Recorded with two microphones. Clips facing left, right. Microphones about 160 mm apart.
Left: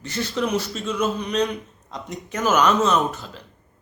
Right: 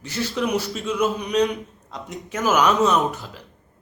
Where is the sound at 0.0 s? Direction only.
10° right (ahead or behind).